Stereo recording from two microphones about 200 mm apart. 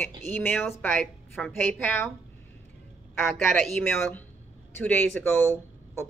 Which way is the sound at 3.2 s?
Centre (ahead or behind).